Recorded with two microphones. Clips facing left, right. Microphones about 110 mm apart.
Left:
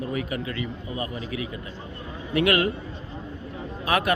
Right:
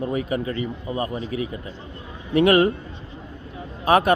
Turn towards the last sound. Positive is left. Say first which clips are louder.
# right 6 dB
turn(degrees=-30)  # may be behind; listen again after turning